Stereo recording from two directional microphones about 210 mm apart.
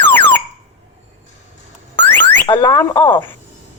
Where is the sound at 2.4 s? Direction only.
20° left (ahead or behind).